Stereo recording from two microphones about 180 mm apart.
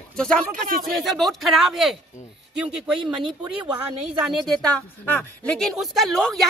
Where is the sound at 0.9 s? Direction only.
Centre (ahead or behind).